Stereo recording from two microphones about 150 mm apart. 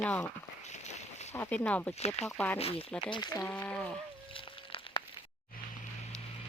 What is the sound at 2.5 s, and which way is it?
Speech, 40° left (ahead or behind).